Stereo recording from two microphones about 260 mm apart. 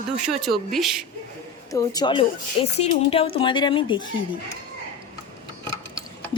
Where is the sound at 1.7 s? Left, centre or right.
Centre.